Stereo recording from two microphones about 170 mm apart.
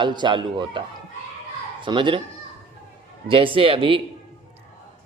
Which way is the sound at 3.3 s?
30° right (ahead or behind).